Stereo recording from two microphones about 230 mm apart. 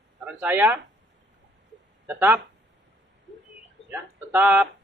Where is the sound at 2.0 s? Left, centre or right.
Centre.